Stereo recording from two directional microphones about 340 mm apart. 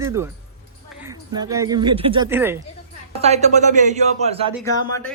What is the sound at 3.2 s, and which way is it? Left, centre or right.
Speech, centre.